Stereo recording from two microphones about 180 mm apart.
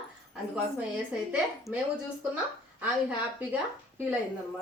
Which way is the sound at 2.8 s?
10° right (ahead or behind).